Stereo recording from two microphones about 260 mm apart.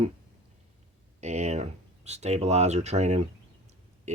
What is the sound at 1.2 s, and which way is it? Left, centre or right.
Speech, right.